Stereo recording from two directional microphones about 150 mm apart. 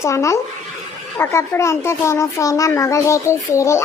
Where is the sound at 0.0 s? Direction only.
20° left (ahead or behind).